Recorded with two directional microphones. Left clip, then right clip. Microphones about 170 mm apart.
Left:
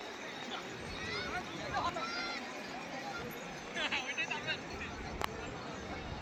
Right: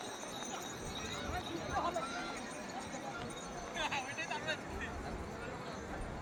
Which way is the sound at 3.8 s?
60° right (ahead or behind).